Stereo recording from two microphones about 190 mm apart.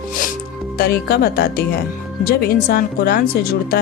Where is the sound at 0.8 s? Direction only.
55° left (ahead or behind).